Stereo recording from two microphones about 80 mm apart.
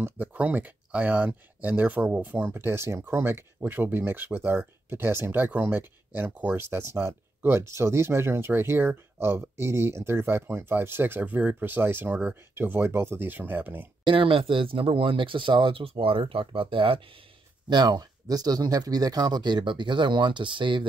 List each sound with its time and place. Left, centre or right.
0.0 s speech: right
14.0 s speech: right
17.6 s speech: right